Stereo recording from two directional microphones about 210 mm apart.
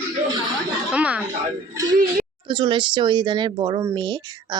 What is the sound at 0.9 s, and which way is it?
Speech, 5° right (ahead or behind).